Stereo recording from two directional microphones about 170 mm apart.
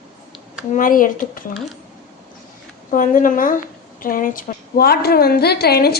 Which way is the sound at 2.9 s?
50° left (ahead or behind).